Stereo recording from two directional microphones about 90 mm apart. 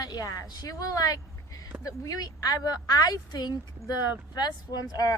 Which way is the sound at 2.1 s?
45° left (ahead or behind).